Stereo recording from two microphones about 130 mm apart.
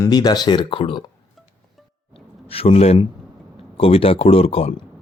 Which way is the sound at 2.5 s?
50° left (ahead or behind).